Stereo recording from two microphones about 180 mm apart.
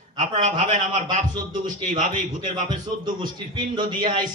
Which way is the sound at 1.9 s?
45° right (ahead or behind).